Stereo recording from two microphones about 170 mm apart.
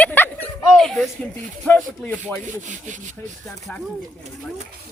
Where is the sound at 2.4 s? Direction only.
45° right (ahead or behind).